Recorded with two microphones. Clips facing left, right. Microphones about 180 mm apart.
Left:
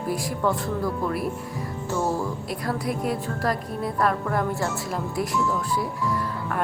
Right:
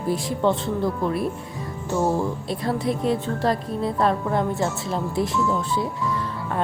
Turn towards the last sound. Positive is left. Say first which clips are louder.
# right 1 dB
turn(degrees=-25)  # may be behind; listen again after turning